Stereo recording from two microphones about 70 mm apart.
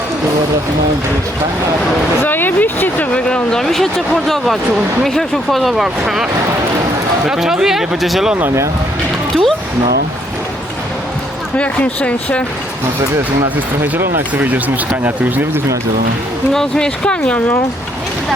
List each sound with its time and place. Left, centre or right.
2.2 s speech: left; by 6.2 s centre
7.3 s speech: centre
9.3 s a sound: centre
11.5 s speech: centre
13.8 s speech: right
16.5 s speech: centre